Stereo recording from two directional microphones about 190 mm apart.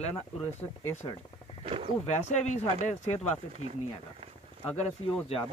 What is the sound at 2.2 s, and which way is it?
Speech, 40° left (ahead or behind).